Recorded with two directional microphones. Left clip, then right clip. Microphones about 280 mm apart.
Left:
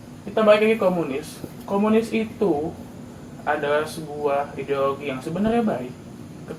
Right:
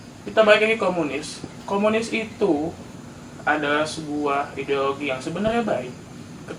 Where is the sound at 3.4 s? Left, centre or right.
Centre.